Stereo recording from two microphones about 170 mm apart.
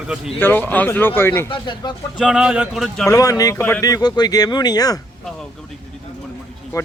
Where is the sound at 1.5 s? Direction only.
30° left (ahead or behind).